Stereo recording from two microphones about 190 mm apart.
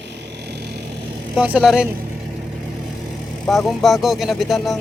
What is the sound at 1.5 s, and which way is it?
Speech, centre (ahead or behind).